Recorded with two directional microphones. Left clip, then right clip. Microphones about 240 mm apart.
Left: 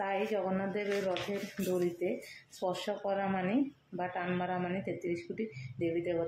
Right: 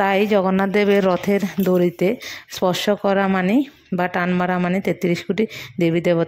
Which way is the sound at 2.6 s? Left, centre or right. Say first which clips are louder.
Right 16 dB; right.